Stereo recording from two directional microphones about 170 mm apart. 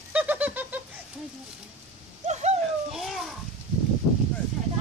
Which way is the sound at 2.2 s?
40° right (ahead or behind).